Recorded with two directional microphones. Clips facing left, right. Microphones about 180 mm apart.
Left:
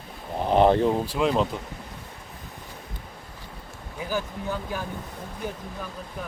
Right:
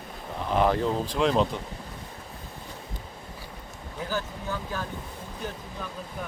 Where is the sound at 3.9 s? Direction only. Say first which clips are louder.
Left 2 dB; 15° left (ahead or behind).